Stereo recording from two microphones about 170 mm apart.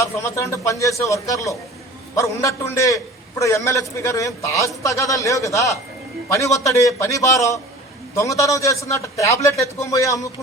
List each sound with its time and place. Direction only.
0.0 s a man's voice: 15° left (ahead or behind)